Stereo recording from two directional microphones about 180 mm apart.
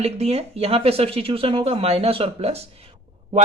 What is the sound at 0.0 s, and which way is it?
Speech, 35° right (ahead or behind).